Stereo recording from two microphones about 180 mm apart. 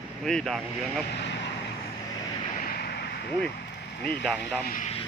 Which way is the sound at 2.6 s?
60° left (ahead or behind).